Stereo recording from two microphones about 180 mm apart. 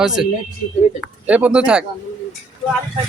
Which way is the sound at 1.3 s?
5° right (ahead or behind).